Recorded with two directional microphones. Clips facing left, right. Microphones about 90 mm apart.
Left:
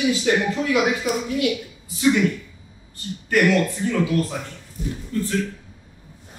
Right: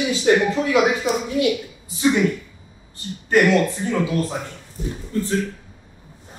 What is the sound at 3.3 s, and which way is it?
Speech, 25° right (ahead or behind).